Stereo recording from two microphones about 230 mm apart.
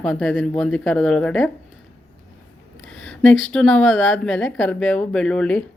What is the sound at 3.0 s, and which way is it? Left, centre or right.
A woman's voice, centre.